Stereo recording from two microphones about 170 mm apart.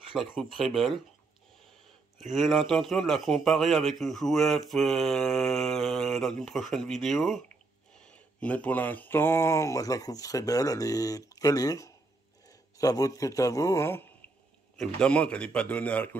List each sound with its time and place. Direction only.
0.1 s a man's voice: 5° right (ahead or behind)
2.1 s a man's voice: centre (ahead or behind)